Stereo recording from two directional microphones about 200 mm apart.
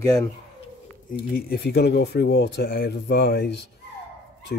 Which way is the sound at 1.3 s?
50° left (ahead or behind).